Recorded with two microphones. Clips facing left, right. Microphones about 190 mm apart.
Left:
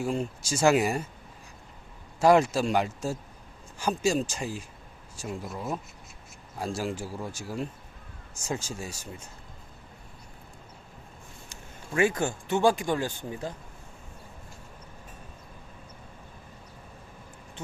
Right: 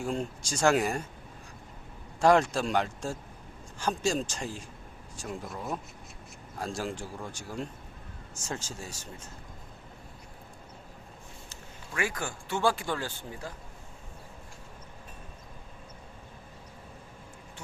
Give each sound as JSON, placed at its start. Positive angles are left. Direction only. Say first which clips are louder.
{"t": 0.0, "sound": "speech", "louder": "left 3 dB", "side_deg": 5}
{"t": 2.2, "sound": "speech", "louder": "left 2 dB", "side_deg": 5}
{"t": 11.9, "sound": "speech", "louder": "left 8 dB", "side_deg": 25}